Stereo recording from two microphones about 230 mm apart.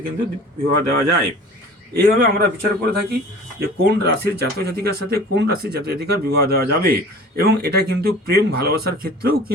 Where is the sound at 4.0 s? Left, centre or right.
Right.